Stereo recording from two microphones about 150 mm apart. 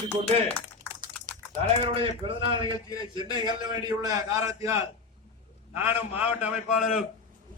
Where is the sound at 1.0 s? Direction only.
60° right (ahead or behind).